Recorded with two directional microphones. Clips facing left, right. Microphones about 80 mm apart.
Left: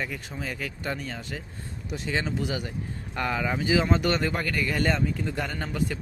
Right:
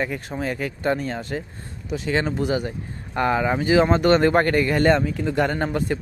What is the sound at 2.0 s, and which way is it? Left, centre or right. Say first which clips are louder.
Speech: right 6 dB; right.